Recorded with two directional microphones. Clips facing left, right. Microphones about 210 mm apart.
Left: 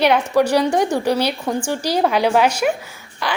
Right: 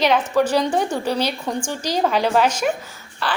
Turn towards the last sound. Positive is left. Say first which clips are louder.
# left 1 dB
turn(degrees=15)  # may be behind; listen again after turning